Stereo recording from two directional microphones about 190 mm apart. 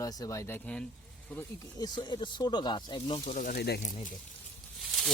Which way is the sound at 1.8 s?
20° left (ahead or behind).